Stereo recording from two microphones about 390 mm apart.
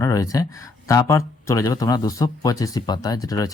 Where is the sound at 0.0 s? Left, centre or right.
Centre.